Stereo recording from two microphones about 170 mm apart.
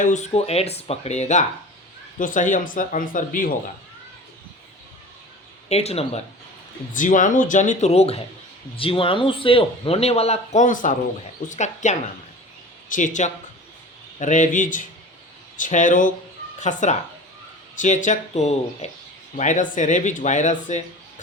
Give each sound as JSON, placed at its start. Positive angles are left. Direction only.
{"t": 0.0, "sound": "speech", "side_deg": 45}
{"t": 5.6, "sound": "speech", "side_deg": 40}
{"t": 6.9, "sound": "speech", "side_deg": 50}